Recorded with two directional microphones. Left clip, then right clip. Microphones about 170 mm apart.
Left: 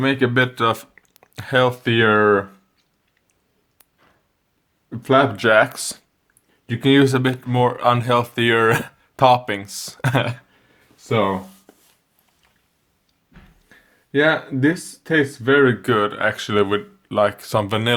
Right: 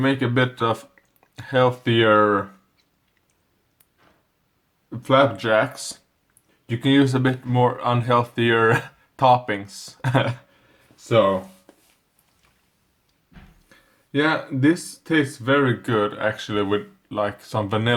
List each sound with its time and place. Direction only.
0.0 s speech: 50° left (ahead or behind)
4.9 s speech: 40° left (ahead or behind)
13.7 s speech: 40° left (ahead or behind); by 17.9 s 60° left (ahead or behind)